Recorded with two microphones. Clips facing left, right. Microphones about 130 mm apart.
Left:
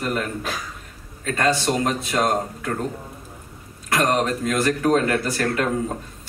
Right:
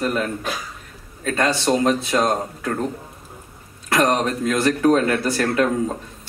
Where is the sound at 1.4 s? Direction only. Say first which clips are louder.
Right 2 dB; 30° right (ahead or behind).